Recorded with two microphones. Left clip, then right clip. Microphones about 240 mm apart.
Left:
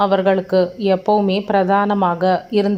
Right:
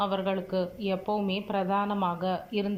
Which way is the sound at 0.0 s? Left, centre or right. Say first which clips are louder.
Left 14 dB; left.